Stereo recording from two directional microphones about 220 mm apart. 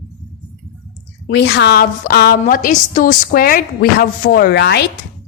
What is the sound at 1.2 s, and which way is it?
A woman's voice, 50° left (ahead or behind).